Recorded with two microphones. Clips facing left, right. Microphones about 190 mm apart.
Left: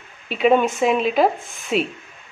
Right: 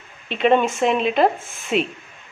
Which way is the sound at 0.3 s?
5° left (ahead or behind).